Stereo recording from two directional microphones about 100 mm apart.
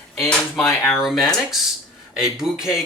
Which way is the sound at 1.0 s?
Centre (ahead or behind).